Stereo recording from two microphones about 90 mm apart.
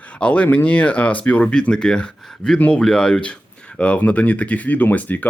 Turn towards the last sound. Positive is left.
turn(degrees=15)  # may be behind; listen again after turning